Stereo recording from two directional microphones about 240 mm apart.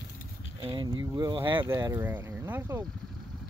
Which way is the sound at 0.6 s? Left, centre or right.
Centre.